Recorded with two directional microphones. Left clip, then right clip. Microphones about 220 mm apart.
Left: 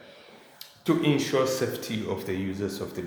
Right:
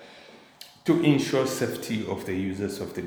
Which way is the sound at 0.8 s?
20° right (ahead or behind).